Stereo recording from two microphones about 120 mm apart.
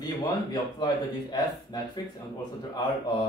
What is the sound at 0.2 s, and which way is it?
Speech, 35° left (ahead or behind).